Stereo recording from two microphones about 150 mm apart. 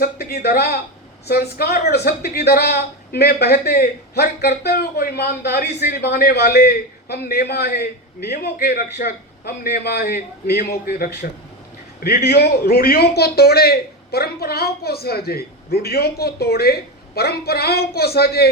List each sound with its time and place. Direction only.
0.0 s a man's voice: 90° left